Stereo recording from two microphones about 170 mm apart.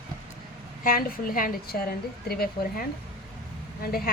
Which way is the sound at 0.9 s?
55° left (ahead or behind).